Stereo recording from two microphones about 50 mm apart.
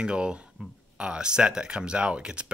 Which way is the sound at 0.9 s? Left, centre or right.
Centre.